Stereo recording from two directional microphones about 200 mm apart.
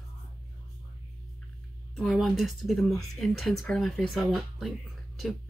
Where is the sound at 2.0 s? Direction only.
Centre (ahead or behind).